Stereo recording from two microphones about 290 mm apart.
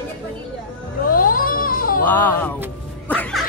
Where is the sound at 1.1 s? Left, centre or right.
Left.